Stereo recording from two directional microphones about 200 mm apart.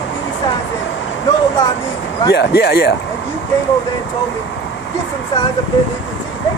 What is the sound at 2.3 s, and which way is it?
Speech, 55° left (ahead or behind).